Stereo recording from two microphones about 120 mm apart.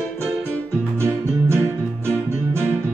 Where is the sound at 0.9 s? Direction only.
25° right (ahead or behind).